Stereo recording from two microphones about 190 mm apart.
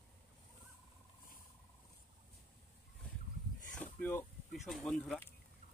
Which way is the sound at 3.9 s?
5° left (ahead or behind).